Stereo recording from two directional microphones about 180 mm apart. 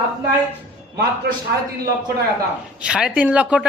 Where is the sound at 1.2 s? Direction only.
65° right (ahead or behind).